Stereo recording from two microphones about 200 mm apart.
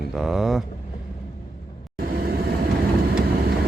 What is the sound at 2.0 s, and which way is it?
Vehicle, 50° right (ahead or behind).